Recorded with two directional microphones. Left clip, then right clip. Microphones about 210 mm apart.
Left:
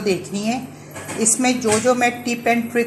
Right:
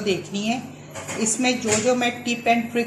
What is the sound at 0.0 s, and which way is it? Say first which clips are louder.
Speech: left 3 dB; 60° left (ahead or behind).